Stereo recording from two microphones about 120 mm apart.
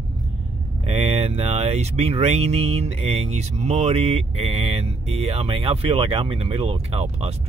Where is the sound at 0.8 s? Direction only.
55° right (ahead or behind).